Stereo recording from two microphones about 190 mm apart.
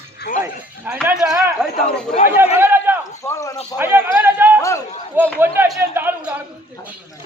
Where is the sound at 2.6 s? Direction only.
10° right (ahead or behind).